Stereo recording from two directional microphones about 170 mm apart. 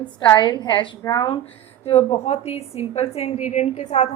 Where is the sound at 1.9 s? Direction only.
40° left (ahead or behind).